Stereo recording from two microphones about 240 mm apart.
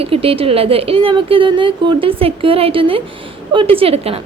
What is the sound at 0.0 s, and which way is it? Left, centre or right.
A woman's voice, right.